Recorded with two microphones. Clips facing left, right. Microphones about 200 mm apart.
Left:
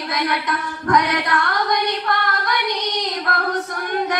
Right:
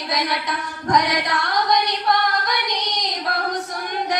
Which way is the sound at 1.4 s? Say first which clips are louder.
Even; 60° left (ahead or behind).